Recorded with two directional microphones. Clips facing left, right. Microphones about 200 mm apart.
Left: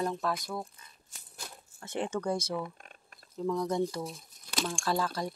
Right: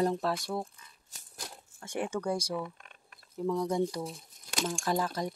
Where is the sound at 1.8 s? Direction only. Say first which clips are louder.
Even; 10° right (ahead or behind).